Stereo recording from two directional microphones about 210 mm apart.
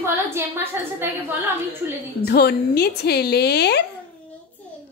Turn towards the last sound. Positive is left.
turn(degrees=50)  # may be behind; listen again after turning